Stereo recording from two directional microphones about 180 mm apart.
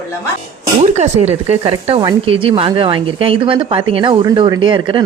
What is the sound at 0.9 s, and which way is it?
Speech, 40° right (ahead or behind).